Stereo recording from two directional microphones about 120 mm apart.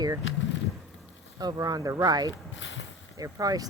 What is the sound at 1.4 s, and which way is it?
Speech, 35° right (ahead or behind).